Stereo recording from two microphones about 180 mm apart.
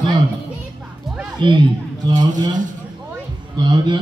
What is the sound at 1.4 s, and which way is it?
Speech, 25° right (ahead or behind).